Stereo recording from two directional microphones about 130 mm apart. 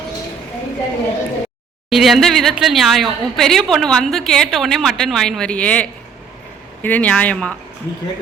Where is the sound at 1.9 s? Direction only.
Centre (ahead or behind).